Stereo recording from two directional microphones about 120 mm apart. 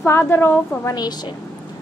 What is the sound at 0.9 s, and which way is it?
Speech, 35° left (ahead or behind).